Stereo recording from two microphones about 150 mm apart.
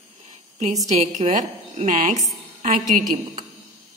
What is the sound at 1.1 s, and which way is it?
A woman's voice, 55° right (ahead or behind).